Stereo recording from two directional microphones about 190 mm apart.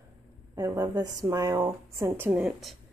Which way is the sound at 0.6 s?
20° right (ahead or behind).